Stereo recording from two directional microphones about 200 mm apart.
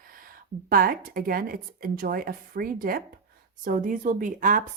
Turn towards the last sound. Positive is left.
turn(degrees=-40)  # may be behind; listen again after turning